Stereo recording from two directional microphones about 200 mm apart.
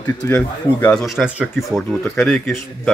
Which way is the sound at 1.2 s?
Centre (ahead or behind).